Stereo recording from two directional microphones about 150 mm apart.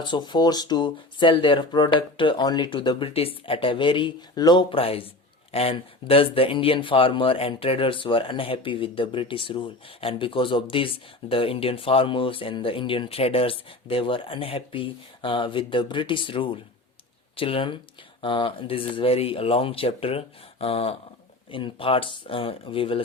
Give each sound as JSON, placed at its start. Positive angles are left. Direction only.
{"t": 0.0, "sound": "speech", "side_deg": 30}